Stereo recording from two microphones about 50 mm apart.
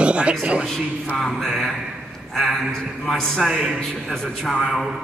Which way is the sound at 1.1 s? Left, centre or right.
Centre.